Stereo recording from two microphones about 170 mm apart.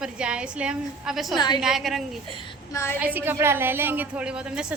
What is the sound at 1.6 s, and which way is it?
Speech, centre (ahead or behind).